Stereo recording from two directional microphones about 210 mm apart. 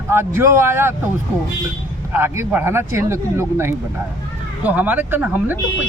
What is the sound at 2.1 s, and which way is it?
Speech, 10° right (ahead or behind).